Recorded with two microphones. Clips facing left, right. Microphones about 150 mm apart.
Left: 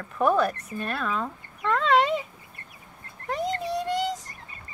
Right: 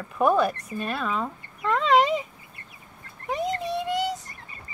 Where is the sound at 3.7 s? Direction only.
Centre (ahead or behind).